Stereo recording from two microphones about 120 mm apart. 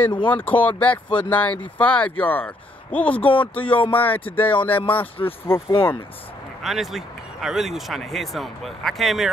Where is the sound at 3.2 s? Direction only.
45° left (ahead or behind).